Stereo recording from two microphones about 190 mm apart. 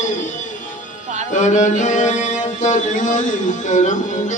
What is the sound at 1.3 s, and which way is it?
Mantra, 40° left (ahead or behind).